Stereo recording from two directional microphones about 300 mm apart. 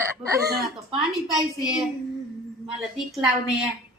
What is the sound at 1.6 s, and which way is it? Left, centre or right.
Child singing, centre.